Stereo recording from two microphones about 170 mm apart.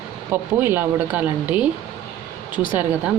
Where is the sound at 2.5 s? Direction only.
25° left (ahead or behind).